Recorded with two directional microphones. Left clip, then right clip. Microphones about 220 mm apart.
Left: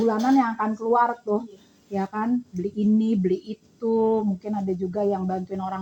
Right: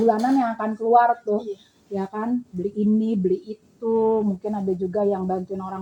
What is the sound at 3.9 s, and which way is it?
Speech, 25° left (ahead or behind).